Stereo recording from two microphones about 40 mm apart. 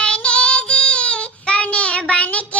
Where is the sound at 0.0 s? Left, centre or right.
Left.